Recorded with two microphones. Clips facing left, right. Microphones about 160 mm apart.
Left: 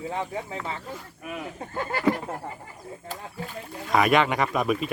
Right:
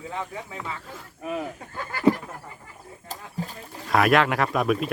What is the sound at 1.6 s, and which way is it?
Speech, 35° left (ahead or behind).